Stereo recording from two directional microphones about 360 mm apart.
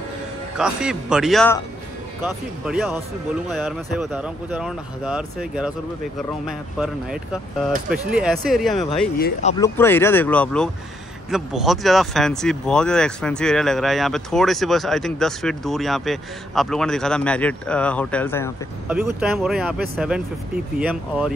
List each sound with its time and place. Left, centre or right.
0.6 s speech: centre
2.6 s speech: centre
9.2 s speech: centre
9.8 s speech: centre
18.9 s speech: centre